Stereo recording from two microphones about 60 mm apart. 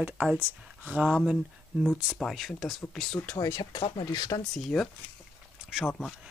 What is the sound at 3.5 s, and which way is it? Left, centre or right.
Speech, left.